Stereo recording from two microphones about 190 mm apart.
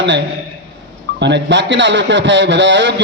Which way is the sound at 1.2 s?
70° right (ahead or behind).